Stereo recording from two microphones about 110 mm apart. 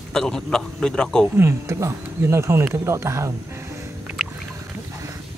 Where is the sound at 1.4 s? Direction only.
25° right (ahead or behind).